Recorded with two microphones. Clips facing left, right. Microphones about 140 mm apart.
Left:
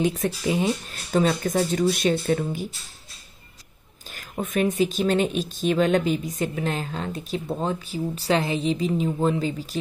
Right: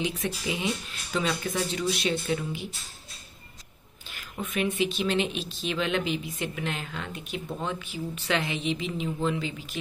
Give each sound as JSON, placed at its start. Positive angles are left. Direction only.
{"t": 0.0, "sound": "speech", "side_deg": 45}
{"t": 4.1, "sound": "speech", "side_deg": 45}